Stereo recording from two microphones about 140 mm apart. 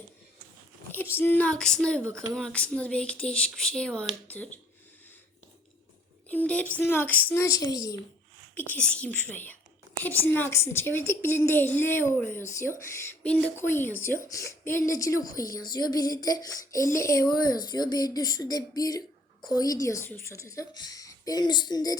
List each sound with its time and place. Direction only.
0.9 s speech: 15° left (ahead or behind)
6.2 s speech: 10° left (ahead or behind)
8.5 s a woman's voice: 15° left (ahead or behind); by 21.9 s 30° left (ahead or behind)